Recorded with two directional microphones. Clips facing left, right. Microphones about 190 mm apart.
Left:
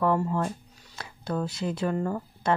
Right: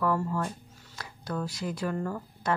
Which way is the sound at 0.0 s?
25° left (ahead or behind).